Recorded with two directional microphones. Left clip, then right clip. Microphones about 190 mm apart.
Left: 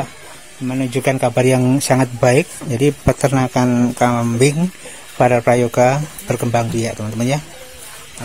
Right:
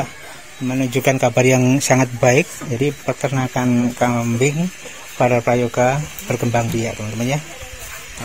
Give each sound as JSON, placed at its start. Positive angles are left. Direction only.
{"t": 0.7, "sound": "speech", "side_deg": 0}
{"t": 2.8, "sound": "speech", "side_deg": 30}